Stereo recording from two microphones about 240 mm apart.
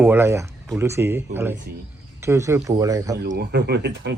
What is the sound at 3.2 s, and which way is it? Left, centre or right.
Speech, right.